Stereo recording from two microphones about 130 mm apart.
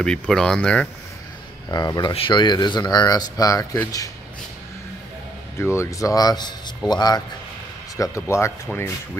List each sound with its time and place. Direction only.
0.0 s speech: 5° left (ahead or behind)
1.7 s speech: 30° left (ahead or behind)
5.6 s speech: 20° left (ahead or behind)
8.0 s speech: 20° left (ahead or behind)